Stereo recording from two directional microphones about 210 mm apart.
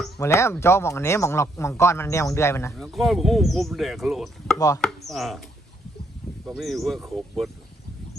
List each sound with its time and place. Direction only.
0.2 s speech: 15° left (ahead or behind)
2.7 s speech: centre (ahead or behind)
4.5 s chopping: 15° left (ahead or behind)
4.8 s chopping: centre (ahead or behind)
6.5 s speech: centre (ahead or behind)